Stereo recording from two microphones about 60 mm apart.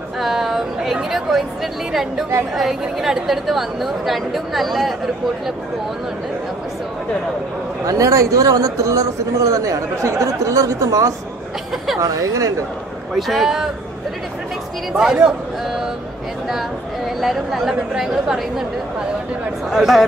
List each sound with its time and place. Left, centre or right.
0.2 s a sound: centre
1.1 s a woman's voice: centre
7.8 s speech: right
13.1 s a man's voice: centre
14.9 s a man's voice: centre
16.4 s a woman's voice: centre
19.7 s a woman's voice: centre